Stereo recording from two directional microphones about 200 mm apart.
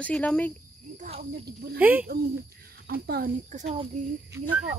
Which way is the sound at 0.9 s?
40° right (ahead or behind).